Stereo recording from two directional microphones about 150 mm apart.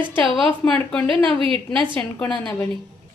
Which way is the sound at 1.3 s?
35° right (ahead or behind).